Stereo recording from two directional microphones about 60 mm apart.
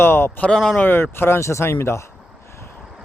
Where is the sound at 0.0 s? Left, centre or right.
Left.